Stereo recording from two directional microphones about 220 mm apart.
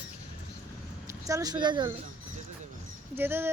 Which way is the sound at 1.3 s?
15° right (ahead or behind).